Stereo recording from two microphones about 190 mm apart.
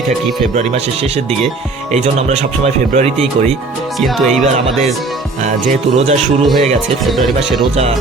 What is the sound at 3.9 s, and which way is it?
Speech, centre (ahead or behind).